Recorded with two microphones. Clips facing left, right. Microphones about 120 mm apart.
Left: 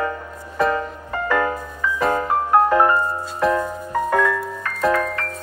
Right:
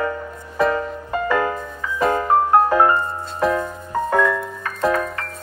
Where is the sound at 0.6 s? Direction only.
Centre (ahead or behind).